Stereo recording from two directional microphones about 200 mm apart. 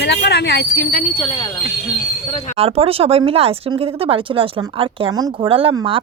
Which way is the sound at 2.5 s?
30° right (ahead or behind).